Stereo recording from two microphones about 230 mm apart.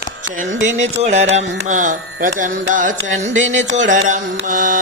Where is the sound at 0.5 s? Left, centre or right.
Right.